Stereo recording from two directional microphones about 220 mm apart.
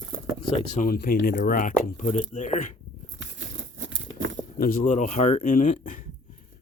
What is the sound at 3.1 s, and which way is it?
Crumpling, 60° right (ahead or behind).